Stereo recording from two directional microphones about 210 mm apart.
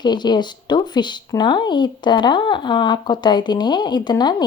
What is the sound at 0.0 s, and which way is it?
Speech, 20° left (ahead or behind).